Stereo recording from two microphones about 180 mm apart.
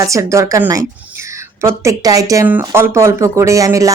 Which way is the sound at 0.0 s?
15° right (ahead or behind).